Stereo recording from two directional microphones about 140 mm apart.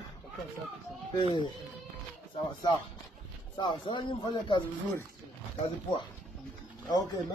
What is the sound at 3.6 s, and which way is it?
Speech, 35° left (ahead or behind).